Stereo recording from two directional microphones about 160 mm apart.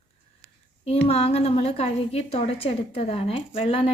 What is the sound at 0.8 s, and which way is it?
Speech, 40° left (ahead or behind).